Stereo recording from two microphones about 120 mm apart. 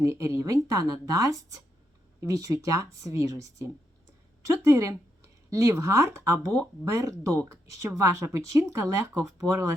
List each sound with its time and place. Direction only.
0.0 s speech: 25° right (ahead or behind)